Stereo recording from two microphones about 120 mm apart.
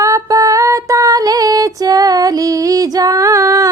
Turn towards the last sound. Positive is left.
turn(degrees=-30)  # may be behind; listen again after turning